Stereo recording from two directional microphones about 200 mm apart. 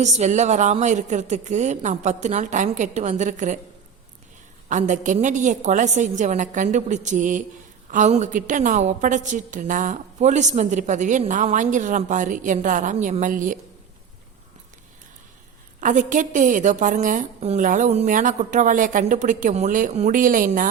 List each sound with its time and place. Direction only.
0.0 s a woman's voice: 35° right (ahead or behind)
4.7 s a woman's voice: 40° right (ahead or behind)
15.8 s a woman's voice: 40° right (ahead or behind)